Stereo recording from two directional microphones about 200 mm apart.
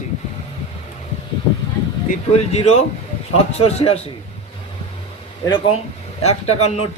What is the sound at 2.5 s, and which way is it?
Speech, 30° left (ahead or behind).